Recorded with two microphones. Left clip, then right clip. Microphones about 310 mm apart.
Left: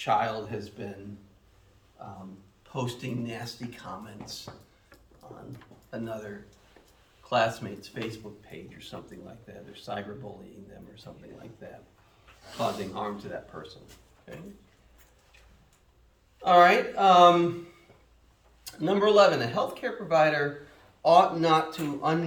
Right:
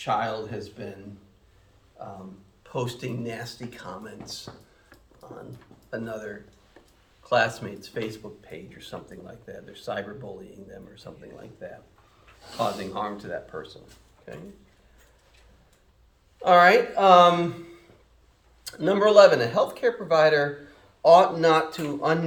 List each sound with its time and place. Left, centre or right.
0.0 s speech: centre
2.7 s speech: centre
5.9 s speech: centre
7.3 s speech: centre
11.6 s speech: centre
16.4 s speech: centre
18.6 s speech: centre